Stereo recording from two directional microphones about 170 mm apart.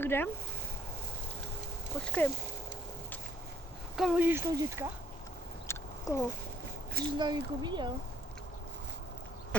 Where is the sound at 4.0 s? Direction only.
5° right (ahead or behind).